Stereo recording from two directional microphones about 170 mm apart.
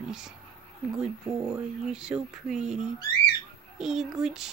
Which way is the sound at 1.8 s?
5° right (ahead or behind).